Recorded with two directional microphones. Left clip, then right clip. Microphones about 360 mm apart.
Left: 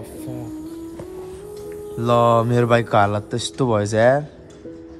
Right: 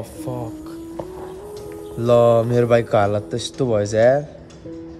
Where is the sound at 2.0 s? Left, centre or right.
Centre.